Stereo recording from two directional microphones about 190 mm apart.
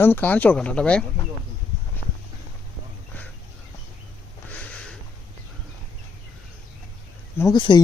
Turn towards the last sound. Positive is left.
turn(degrees=25)  # may be behind; listen again after turning